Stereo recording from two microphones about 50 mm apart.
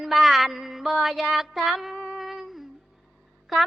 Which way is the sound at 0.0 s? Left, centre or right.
Centre.